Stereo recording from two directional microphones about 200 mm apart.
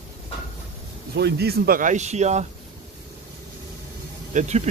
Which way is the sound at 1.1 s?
55° right (ahead or behind).